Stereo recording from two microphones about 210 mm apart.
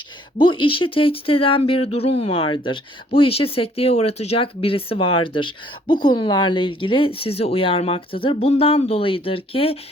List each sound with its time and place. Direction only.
0.6 s speech: 25° left (ahead or behind)